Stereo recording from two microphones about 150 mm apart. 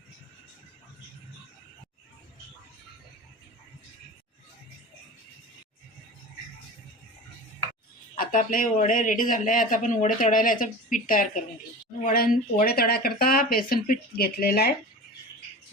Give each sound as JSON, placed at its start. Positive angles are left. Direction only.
{"t": 8.1, "sound": "speech", "side_deg": 65}